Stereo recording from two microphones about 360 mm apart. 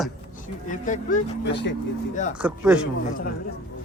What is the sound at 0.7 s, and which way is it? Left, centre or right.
Speech, left.